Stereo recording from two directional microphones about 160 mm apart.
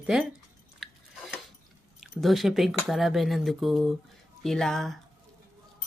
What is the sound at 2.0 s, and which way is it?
Speech, centre (ahead or behind).